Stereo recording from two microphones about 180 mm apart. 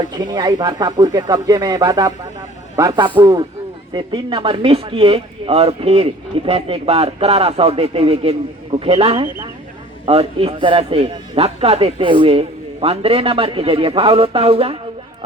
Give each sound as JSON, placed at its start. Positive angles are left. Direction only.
{"t": 0.2, "sound": "a man's voice", "side_deg": -25}